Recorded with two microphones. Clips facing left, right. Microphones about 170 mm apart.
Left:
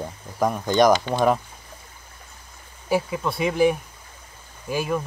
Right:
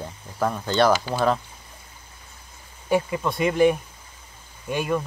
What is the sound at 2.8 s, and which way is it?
Speech, centre (ahead or behind).